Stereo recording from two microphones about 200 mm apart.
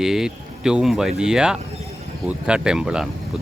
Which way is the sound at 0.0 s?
Centre (ahead or behind).